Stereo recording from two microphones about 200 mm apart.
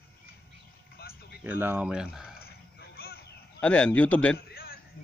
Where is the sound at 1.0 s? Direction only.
50° left (ahead or behind).